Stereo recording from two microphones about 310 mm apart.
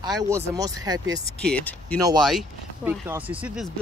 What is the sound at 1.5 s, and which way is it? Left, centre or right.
Speech, centre.